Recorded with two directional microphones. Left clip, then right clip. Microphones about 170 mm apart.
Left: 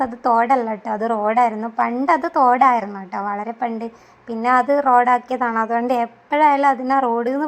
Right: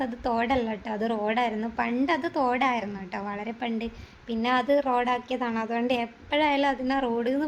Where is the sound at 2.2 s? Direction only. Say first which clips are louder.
Left 11 dB; 15° left (ahead or behind).